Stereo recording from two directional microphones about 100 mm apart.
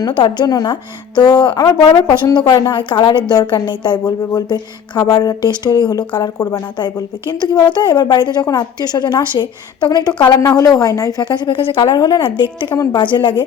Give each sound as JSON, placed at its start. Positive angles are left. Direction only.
{"t": 0.0, "sound": "a woman's voice", "side_deg": 50}
{"t": 10.4, "sound": "speech", "side_deg": 35}
{"t": 11.3, "sound": "a woman's voice", "side_deg": 50}
{"t": 11.9, "sound": "speech", "side_deg": 40}
{"t": 12.2, "sound": "a woman's voice", "side_deg": 50}
{"t": 12.7, "sound": "speech", "side_deg": 35}
{"t": 13.0, "sound": "a woman's voice", "side_deg": 50}